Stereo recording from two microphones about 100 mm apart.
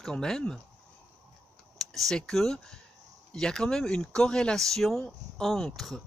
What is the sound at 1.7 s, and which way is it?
Speech, centre (ahead or behind).